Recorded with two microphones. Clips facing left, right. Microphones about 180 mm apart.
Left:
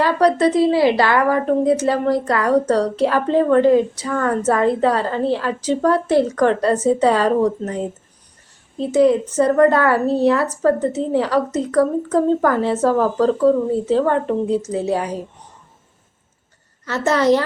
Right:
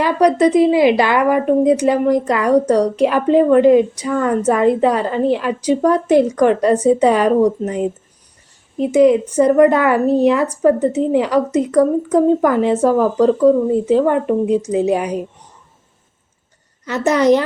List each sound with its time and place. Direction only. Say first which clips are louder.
0.0 s a woman's voice: right 2 dB; 15° right (ahead or behind)
16.8 s a woman's voice: right 3 dB; 15° right (ahead or behind)